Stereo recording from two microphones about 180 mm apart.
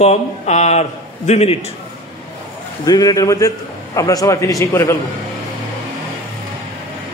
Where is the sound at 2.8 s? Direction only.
20° left (ahead or behind).